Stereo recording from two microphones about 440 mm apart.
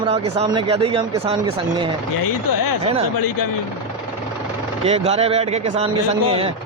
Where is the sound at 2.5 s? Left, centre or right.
Left.